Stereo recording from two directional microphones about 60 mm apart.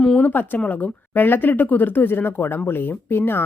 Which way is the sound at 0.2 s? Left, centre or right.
Left.